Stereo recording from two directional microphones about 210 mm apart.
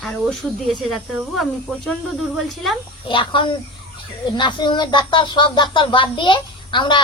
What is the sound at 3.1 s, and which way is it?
Speech, 25° left (ahead or behind).